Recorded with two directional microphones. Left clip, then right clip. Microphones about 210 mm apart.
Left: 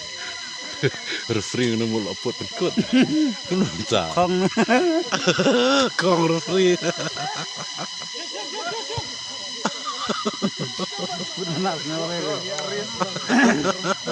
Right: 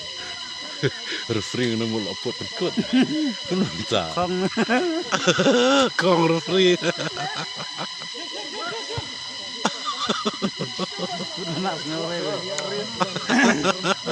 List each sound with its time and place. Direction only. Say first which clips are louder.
0.8 s speech: left 1 dB; 10° left (ahead or behind)
2.7 s speech: left 2 dB; 55° left (ahead or behind)
3.5 s speech: right 1 dB; 15° left (ahead or behind)
4.1 s speech: left 3 dB; 55° left (ahead or behind)
5.1 s speech: right 4 dB; centre (ahead or behind)
9.6 s a sound: right 2 dB; 5° right (ahead or behind)
13.3 s speech: left 1 dB; 40° left (ahead or behind)
13.6 s speech: right 1 dB; 5° right (ahead or behind)